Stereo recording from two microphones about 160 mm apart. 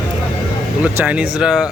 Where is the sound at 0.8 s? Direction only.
10° right (ahead or behind).